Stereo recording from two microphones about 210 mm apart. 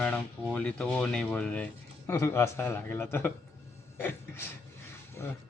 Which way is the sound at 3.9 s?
10° left (ahead or behind).